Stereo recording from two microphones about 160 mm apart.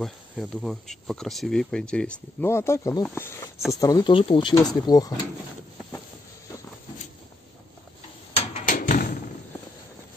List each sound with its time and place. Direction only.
0.0 s speech: centre (ahead or behind); by 5.1 s 25° left (ahead or behind)
8.6 s thump: 55° left (ahead or behind)